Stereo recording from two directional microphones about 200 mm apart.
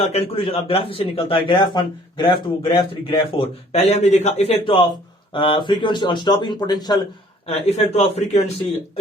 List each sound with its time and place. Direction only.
0.1 s a man's voice: 30° left (ahead or behind)
7.4 s a man's voice: 30° left (ahead or behind)